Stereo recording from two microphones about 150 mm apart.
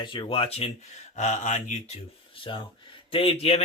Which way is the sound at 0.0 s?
35° left (ahead or behind).